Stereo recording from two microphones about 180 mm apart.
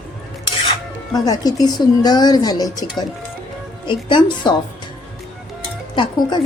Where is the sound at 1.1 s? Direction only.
20° left (ahead or behind).